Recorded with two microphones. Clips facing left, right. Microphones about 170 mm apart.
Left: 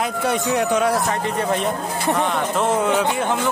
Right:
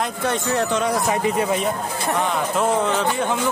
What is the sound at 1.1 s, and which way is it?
Speech, 5° right (ahead or behind).